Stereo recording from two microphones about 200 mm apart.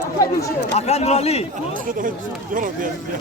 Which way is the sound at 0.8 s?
30° left (ahead or behind).